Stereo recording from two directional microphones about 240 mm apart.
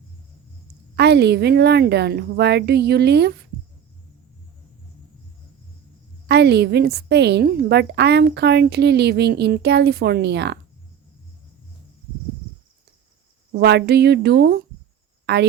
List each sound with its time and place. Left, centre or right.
0.9 s a woman's voice: right
6.2 s a woman's voice: right
13.5 s a woman's voice: right